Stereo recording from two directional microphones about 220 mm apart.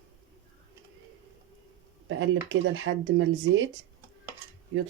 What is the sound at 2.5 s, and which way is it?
Speech, 60° right (ahead or behind).